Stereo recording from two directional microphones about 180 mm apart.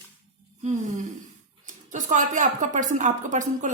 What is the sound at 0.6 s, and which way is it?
A woman's voice, 40° right (ahead or behind).